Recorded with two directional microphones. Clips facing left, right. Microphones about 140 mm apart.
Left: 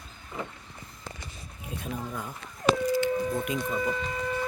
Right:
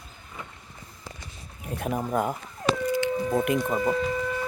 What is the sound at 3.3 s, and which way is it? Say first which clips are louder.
Speech: right 6 dB; 90° right.